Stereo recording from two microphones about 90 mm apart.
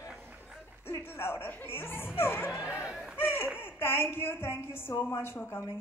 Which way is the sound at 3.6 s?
25° left (ahead or behind).